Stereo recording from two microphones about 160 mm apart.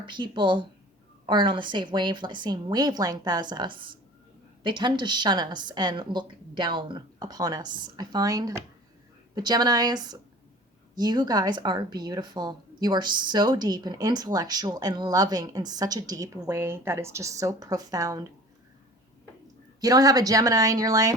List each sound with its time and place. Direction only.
0.0 s speech: 30° right (ahead or behind)
19.8 s speech: 20° right (ahead or behind)